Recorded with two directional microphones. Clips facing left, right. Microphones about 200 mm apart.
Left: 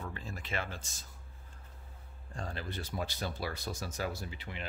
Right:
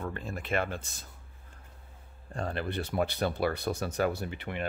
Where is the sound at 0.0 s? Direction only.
55° right (ahead or behind).